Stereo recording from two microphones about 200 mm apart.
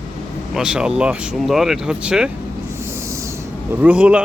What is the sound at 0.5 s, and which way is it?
Speech, 5° right (ahead or behind).